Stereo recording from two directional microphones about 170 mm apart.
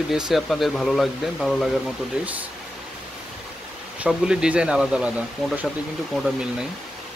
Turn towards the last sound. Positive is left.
turn(degrees=0)  # may be behind; listen again after turning